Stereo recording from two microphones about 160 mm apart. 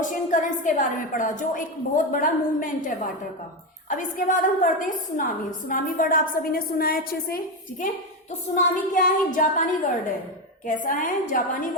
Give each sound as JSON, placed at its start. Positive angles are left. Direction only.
{"t": 0.0, "sound": "a woman's voice", "side_deg": 55}
{"t": 8.9, "sound": "a woman's voice", "side_deg": 55}